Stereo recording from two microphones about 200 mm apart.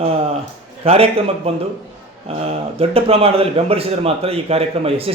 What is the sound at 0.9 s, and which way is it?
A man's voice, 30° right (ahead or behind).